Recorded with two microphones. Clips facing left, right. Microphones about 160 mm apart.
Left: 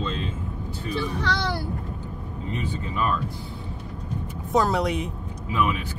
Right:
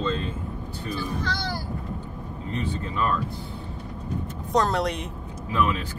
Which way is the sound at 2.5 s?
10° left (ahead or behind).